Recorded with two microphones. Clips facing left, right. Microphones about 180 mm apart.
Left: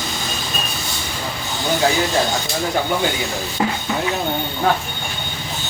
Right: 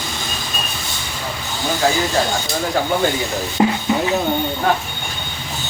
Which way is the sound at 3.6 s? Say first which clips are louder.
Right 5 dB; 25° right (ahead or behind).